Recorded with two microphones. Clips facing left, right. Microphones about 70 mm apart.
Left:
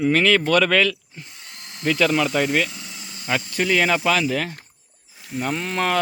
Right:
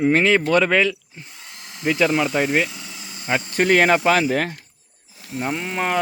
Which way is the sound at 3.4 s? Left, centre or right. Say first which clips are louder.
Right 5 dB; right.